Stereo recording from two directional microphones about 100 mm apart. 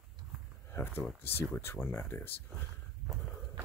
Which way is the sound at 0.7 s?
30° left (ahead or behind).